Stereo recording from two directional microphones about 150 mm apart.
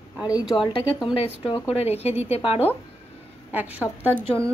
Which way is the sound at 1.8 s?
40° left (ahead or behind).